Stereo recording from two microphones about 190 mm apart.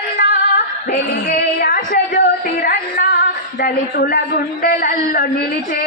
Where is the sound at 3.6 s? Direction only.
50° left (ahead or behind).